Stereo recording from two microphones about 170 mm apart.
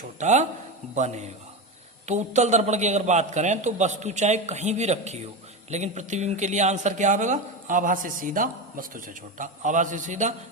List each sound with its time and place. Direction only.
0.2 s a man's voice: 45° right (ahead or behind)